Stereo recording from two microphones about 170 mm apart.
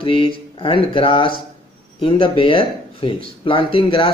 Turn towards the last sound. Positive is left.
turn(degrees=30)  # may be behind; listen again after turning